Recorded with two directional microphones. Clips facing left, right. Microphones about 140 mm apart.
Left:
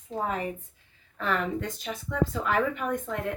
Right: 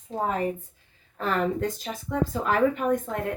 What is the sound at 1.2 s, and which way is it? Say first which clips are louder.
Speech: right 3 dB; 40° right (ahead or behind).